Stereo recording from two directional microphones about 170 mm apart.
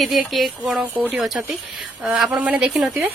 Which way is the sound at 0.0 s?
Centre (ahead or behind).